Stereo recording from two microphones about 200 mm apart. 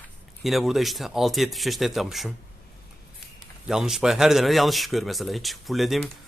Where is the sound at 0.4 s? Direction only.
Centre (ahead or behind).